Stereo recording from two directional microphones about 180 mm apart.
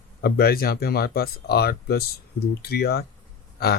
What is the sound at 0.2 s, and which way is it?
Speech, 60° left (ahead or behind).